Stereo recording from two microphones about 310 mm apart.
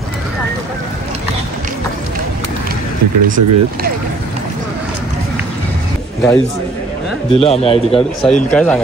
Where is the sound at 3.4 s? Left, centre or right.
Right.